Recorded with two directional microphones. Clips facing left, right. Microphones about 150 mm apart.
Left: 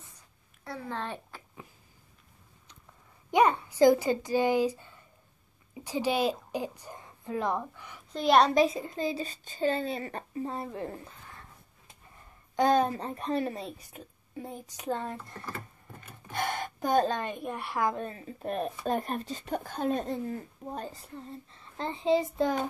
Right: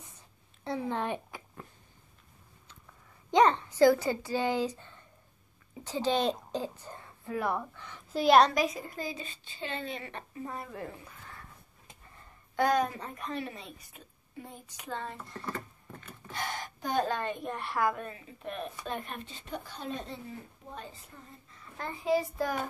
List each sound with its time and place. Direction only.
0.7 s a child's voice: 20° right (ahead or behind)
3.3 s a woman's voice: 10° left (ahead or behind)
8.1 s a child's voice: centre (ahead or behind)
8.5 s a child's voice: 25° left (ahead or behind)
9.1 s speech: 40° left (ahead or behind)
12.5 s speech: 25° left (ahead or behind); by 15.1 s 40° left (ahead or behind)
16.3 s a sound: 55° left (ahead or behind)
17.0 s a child's voice: 15° left (ahead or behind)
17.9 s speech: 35° left (ahead or behind)